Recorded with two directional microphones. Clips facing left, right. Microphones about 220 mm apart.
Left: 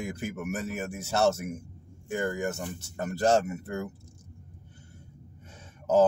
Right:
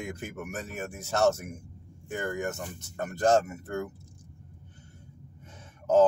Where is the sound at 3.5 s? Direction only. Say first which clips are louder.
Even; 10° left (ahead or behind).